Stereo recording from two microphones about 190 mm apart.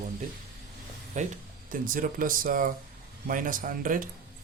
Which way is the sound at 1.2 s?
40° right (ahead or behind).